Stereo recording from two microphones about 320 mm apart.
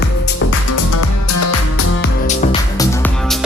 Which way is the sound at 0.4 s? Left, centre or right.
Left.